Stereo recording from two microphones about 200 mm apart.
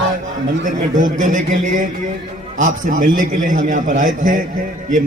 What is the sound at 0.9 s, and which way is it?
A man's voice, 40° right (ahead or behind).